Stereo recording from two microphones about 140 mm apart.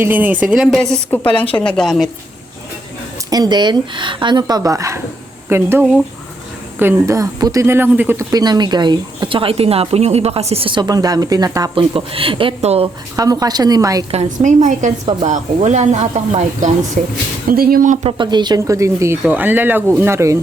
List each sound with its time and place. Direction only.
0.0 s speech: 15° right (ahead or behind)
1.4 s a woman's voice: 10° left (ahead or behind)
3.2 s speech: 25° right (ahead or behind)
8.3 s a woman's voice: 30° right (ahead or behind)
11.7 s a woman's voice: 40° right (ahead or behind)
13.1 s speech: 25° right (ahead or behind)
14.3 s speech: 65° right (ahead or behind)
17.5 s speech: 90° right
18.0 s speech: 35° right (ahead or behind)